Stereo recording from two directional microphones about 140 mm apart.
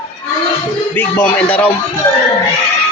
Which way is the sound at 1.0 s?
10° left (ahead or behind).